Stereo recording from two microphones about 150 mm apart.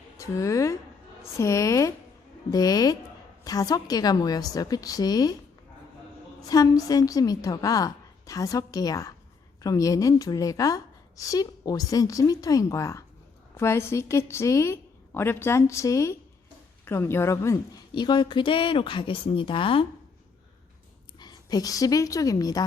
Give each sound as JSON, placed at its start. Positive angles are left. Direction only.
{"t": 0.2, "sound": "a woman's voice", "side_deg": 20}
{"t": 6.4, "sound": "a woman's voice", "side_deg": 25}
{"t": 17.9, "sound": "speech", "side_deg": 30}
{"t": 21.2, "sound": "a woman's voice", "side_deg": 25}